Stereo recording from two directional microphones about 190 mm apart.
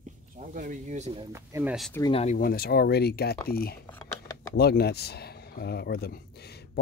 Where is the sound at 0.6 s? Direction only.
40° right (ahead or behind).